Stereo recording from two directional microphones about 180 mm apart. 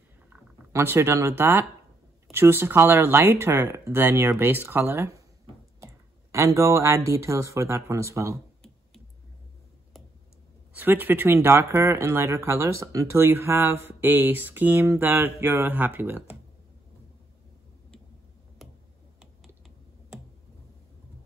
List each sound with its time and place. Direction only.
0.3 s speech: 15° right (ahead or behind)
6.3 s speech: 15° right (ahead or behind)
10.7 s speech: 10° right (ahead or behind)
18.6 s finger snapping: centre (ahead or behind)